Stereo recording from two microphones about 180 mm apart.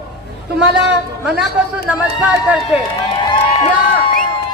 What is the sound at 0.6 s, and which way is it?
Speech, 5° right (ahead or behind).